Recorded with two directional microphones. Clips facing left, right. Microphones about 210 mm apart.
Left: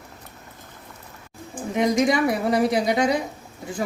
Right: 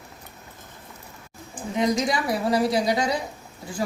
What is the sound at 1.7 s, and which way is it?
A woman's voice, 20° left (ahead or behind).